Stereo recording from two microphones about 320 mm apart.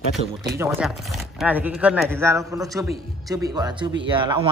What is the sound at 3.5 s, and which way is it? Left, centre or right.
Speech, centre.